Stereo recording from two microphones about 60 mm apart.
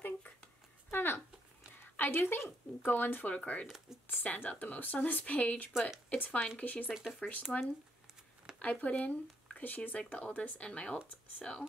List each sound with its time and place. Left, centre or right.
0.8 s a sound: left
1.8 s speech: left
3.3 s speech: left
3.6 s speech: centre
4.1 s speech: left
5.7 s speech: centre
6.0 s speech: left
6.9 s speech: centre
8.5 s speech: left